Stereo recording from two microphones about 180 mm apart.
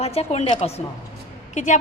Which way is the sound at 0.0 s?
35° left (ahead or behind).